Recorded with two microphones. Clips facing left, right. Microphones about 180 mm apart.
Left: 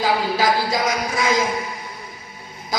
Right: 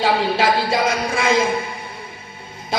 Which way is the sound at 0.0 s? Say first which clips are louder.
Right 2 dB; 25° right (ahead or behind).